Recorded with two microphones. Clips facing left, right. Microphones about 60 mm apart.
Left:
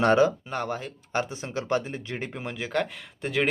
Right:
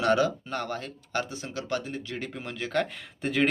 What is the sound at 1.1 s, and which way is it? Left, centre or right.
Speech, left.